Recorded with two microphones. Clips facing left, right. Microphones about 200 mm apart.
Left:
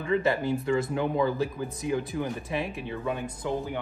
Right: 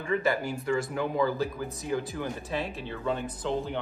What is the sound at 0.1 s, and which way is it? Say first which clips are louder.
Speech: left 2 dB; 25° left (ahead or behind).